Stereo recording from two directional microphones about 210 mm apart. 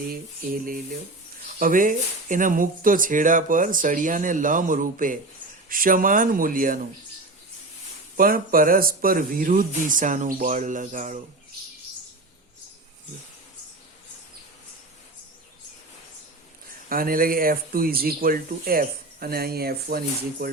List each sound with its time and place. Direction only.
0.1 s speech: 45° right (ahead or behind)
8.1 s speech: 40° right (ahead or behind)
16.9 s speech: 45° right (ahead or behind)